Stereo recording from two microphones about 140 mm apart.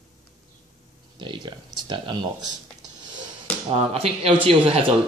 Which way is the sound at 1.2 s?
35° right (ahead or behind).